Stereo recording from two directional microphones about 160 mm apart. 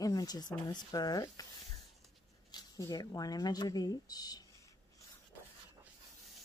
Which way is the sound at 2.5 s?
25° left (ahead or behind).